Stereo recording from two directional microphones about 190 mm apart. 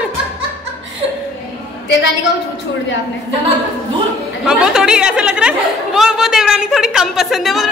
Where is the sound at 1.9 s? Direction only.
70° left (ahead or behind).